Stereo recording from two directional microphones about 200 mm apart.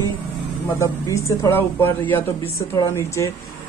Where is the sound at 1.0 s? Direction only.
15° left (ahead or behind).